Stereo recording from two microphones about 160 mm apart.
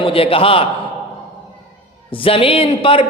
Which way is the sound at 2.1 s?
35° left (ahead or behind).